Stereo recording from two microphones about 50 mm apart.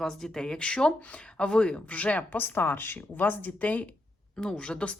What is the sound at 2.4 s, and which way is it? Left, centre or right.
Speech, left.